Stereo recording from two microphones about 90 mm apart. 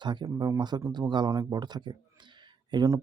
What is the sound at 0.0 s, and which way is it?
Speech, 55° right (ahead or behind).